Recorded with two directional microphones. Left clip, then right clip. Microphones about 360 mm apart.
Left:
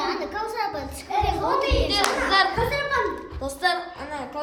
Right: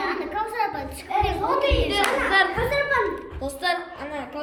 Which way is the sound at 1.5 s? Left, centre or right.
Centre.